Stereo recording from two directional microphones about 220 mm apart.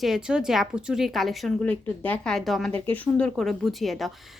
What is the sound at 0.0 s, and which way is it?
A woman's voice, centre (ahead or behind).